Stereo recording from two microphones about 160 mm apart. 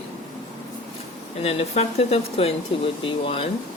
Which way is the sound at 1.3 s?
40° left (ahead or behind).